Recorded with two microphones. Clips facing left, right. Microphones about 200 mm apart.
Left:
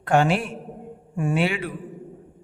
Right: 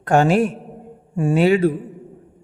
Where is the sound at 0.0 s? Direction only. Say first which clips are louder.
Right 5 dB; 40° right (ahead or behind).